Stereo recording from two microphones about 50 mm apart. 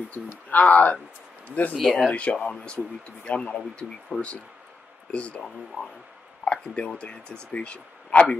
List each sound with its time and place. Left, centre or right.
0.1 s speech: left
1.8 s speech: centre
2.0 s speech: left
4.1 s speech: right
5.1 s speech: left
5.7 s speech: right
6.4 s a sound: left
7.0 s speech: left